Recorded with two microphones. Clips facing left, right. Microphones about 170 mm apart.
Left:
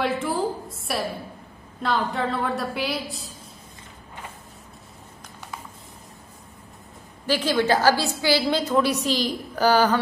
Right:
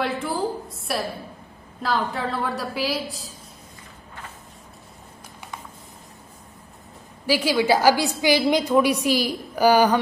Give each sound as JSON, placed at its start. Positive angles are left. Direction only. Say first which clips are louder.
{"t": 0.0, "sound": "a woman's voice", "louder": "left 1 dB", "side_deg": 0}
{"t": 7.2, "sound": "a woman's voice", "louder": "right 1 dB", "side_deg": -10}